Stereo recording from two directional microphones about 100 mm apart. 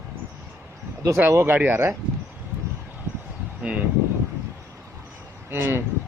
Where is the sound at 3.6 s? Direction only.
10° right (ahead or behind).